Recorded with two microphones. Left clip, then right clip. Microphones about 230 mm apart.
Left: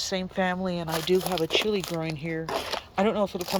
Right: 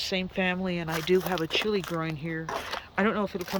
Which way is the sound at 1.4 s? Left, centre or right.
Centre.